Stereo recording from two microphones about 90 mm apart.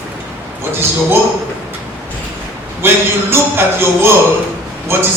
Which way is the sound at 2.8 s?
25° right (ahead or behind).